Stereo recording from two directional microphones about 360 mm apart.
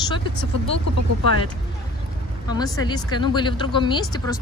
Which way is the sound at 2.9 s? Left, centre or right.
Centre.